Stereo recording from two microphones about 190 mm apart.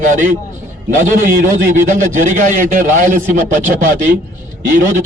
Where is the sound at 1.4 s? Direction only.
40° right (ahead or behind).